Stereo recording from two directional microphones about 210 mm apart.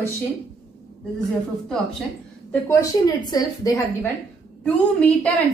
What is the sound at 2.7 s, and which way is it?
A woman's voice, 15° left (ahead or behind).